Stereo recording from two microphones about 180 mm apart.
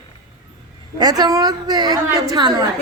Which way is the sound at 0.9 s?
20° right (ahead or behind).